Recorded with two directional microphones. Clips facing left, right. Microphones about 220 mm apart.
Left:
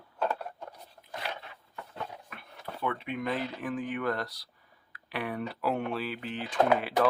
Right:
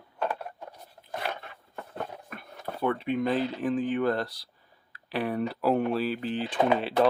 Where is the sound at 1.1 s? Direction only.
50° right (ahead or behind).